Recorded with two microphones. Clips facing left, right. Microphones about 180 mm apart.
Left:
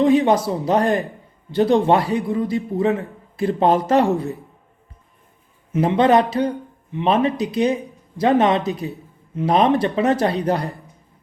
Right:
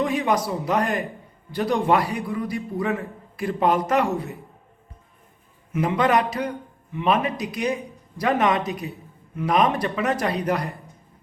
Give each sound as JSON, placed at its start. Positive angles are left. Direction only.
{"t": 0.0, "sound": "a man's voice", "side_deg": 25}
{"t": 5.7, "sound": "a man's voice", "side_deg": 30}